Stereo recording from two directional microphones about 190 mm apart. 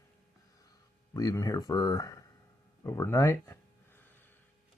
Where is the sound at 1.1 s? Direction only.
20° left (ahead or behind).